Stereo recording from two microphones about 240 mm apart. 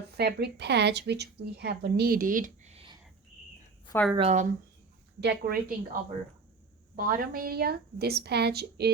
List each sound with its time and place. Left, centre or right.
0.1 s speech: right
3.8 s a woman's voice: centre
4.2 s speech: right
5.2 s a woman's voice: right